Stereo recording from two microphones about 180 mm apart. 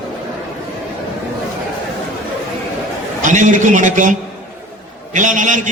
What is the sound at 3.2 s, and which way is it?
Speech, 45° right (ahead or behind).